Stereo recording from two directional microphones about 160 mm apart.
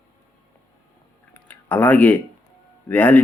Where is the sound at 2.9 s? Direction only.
10° left (ahead or behind).